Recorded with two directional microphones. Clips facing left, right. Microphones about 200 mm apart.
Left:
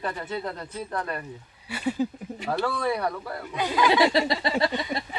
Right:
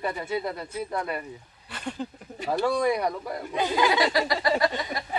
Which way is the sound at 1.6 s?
5° left (ahead or behind).